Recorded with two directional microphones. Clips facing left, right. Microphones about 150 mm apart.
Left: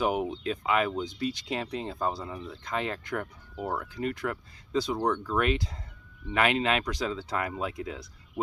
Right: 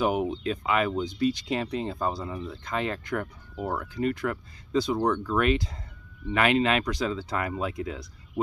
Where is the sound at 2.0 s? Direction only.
5° left (ahead or behind).